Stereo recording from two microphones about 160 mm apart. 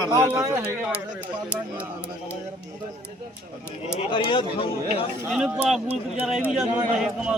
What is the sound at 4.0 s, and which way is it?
Speech, 30° left (ahead or behind).